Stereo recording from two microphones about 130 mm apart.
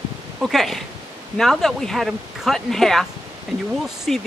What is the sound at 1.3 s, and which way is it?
Speech, centre (ahead or behind).